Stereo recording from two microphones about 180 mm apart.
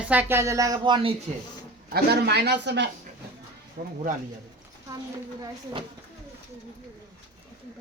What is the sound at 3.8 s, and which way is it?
Speech, 50° right (ahead or behind).